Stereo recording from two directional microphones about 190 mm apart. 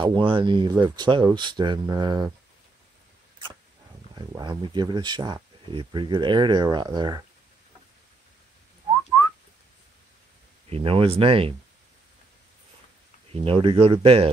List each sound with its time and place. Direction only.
0.0 s speech: 25° right (ahead or behind)
4.1 s speech: 20° right (ahead or behind)
10.7 s speech: 30° right (ahead or behind)
13.3 s speech: 30° right (ahead or behind)